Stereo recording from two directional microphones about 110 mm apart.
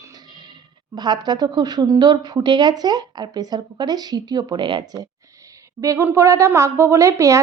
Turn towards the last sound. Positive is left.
turn(degrees=-30)  # may be behind; listen again after turning